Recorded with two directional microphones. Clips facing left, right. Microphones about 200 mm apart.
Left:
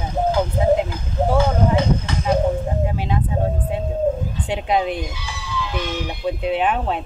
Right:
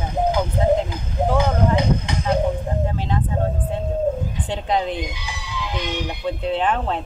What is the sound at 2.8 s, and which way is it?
Speech, 10° left (ahead or behind).